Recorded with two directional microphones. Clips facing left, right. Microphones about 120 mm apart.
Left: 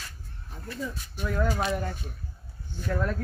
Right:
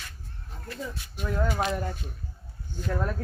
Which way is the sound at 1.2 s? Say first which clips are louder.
Left 1 dB; 15° right (ahead or behind).